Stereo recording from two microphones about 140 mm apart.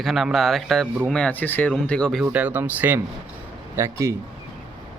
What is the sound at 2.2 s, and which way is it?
Speech, 10° right (ahead or behind).